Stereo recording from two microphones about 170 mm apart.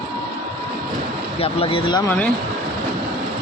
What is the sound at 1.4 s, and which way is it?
Speech, 35° left (ahead or behind).